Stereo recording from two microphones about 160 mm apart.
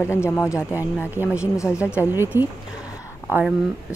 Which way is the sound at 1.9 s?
10° right (ahead or behind).